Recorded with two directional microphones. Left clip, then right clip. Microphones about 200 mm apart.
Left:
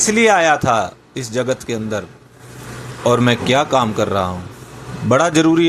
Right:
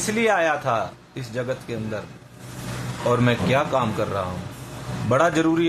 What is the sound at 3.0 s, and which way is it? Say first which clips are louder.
Speech: left 6 dB; 20° left (ahead or behind).